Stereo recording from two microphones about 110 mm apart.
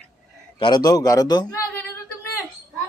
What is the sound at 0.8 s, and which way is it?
Speech, 30° left (ahead or behind).